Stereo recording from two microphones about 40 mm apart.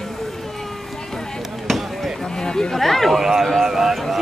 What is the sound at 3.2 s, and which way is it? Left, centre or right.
Speech, centre.